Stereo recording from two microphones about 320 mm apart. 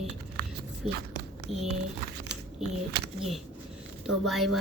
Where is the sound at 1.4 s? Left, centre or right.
Right.